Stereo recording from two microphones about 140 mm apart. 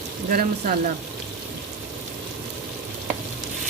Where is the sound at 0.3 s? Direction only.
80° right.